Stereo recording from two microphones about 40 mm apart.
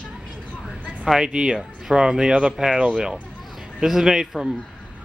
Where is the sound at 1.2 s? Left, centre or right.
Centre.